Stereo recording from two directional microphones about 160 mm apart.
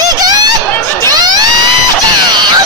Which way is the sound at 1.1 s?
25° right (ahead or behind).